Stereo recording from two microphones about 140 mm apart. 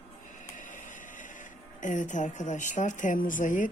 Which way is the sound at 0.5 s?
65° left (ahead or behind).